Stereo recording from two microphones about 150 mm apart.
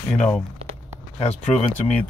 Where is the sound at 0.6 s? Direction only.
40° right (ahead or behind).